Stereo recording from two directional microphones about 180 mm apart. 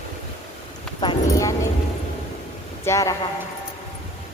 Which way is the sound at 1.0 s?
20° left (ahead or behind).